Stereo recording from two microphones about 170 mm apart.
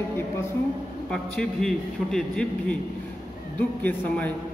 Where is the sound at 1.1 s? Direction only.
5° left (ahead or behind).